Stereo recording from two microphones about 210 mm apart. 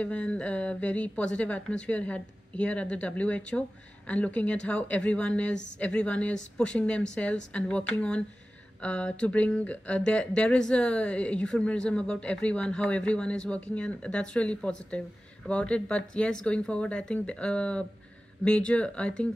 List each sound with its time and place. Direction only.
0.0 s speech: 5° left (ahead or behind)